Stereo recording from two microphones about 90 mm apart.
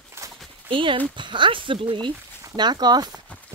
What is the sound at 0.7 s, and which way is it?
Speech, 70° right (ahead or behind).